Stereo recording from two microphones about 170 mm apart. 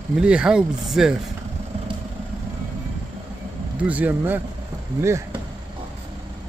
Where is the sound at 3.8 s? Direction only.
10° right (ahead or behind).